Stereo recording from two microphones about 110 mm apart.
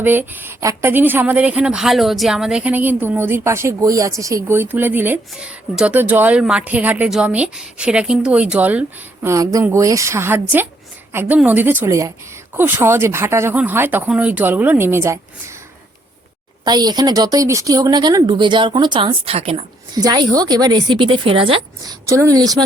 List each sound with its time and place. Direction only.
0.0 s a woman's voice: 15° right (ahead or behind)
9.3 s a woman's voice: 30° right (ahead or behind)
16.6 s speech: 40° right (ahead or behind)
19.2 s a woman's voice: 65° right (ahead or behind)
20.0 s speech: 35° right (ahead or behind); by 21.6 s 55° right (ahead or behind)
21.8 s speech: 30° right (ahead or behind)